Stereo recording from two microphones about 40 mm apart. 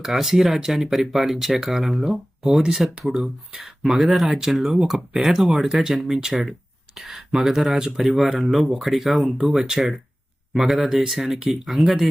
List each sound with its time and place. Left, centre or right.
0.0 s speech: centre